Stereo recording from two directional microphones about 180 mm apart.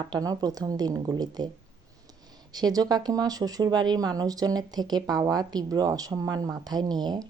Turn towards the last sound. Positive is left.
turn(degrees=-25)  # may be behind; listen again after turning